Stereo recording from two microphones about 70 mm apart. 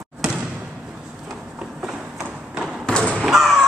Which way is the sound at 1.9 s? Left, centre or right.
Centre.